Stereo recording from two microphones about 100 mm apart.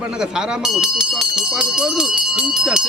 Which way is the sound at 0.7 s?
5° right (ahead or behind).